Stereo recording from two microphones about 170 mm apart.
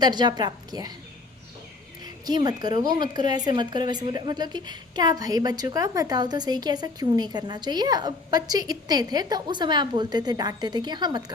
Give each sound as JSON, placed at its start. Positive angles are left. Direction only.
{"t": 0.0, "sound": "a woman's voice", "side_deg": -25}
{"t": 2.0, "sound": "a woman's voice", "side_deg": -25}